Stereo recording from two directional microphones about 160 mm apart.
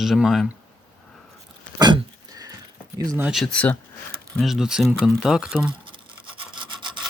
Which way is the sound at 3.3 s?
5° left (ahead or behind).